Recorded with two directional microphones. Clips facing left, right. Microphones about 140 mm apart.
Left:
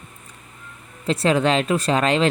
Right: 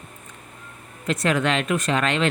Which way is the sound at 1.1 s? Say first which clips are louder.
Left 3 dB; 30° left (ahead or behind).